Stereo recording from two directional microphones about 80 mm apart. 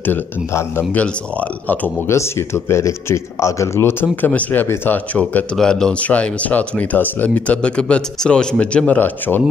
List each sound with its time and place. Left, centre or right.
0.5 s speech: left
2.0 s speech: left
5.6 s speech: centre